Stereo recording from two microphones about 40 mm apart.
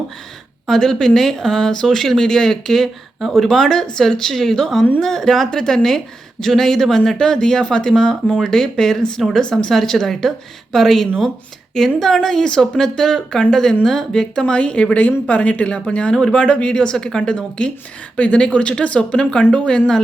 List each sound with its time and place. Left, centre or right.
0.7 s a woman's voice: centre; by 20.0 s left